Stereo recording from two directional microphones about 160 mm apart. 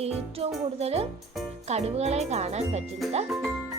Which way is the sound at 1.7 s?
40° right (ahead or behind).